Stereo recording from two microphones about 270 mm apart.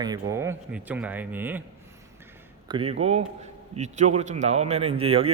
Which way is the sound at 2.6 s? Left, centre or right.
Centre.